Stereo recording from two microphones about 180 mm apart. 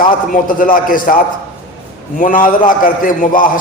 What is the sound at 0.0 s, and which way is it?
A man's voice, 50° left (ahead or behind).